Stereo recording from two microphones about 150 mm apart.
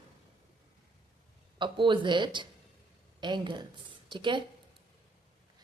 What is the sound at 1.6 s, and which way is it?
A woman's voice, 30° right (ahead or behind).